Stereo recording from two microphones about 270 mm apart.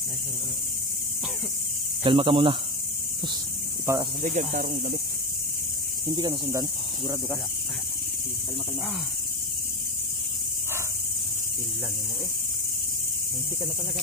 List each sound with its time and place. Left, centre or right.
2.0 s speech: centre
3.8 s speech: centre
4.2 s speech: right
6.1 s speech: centre